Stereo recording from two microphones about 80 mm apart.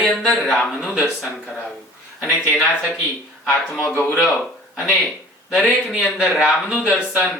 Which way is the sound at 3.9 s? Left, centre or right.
Left.